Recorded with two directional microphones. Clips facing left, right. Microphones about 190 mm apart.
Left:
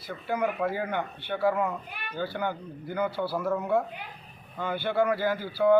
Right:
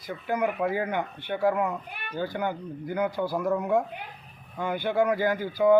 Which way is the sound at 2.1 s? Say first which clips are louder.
Right 2 dB; 15° right (ahead or behind).